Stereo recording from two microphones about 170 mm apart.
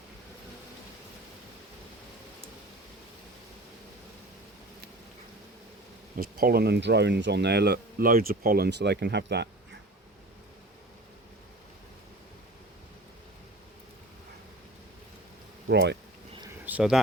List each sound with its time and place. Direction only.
6.1 s speech: 60° right (ahead or behind); by 9.5 s 80° right
15.6 s speech: 90° right
16.6 s speech: 5° right (ahead or behind)